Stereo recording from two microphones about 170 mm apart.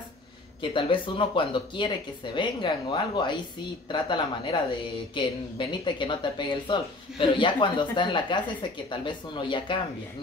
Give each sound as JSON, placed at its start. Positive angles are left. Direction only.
{"t": 0.6, "sound": "speech", "side_deg": 30}